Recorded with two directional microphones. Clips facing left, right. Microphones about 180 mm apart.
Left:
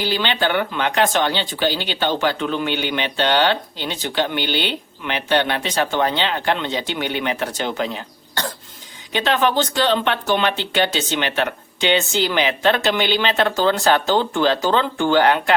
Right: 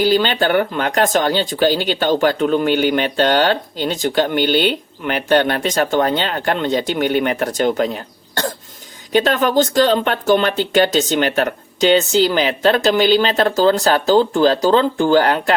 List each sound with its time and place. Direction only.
0.0 s speech: 45° right (ahead or behind)